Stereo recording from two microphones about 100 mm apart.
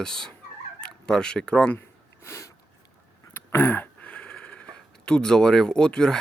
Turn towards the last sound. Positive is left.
turn(degrees=10)  # may be behind; listen again after turning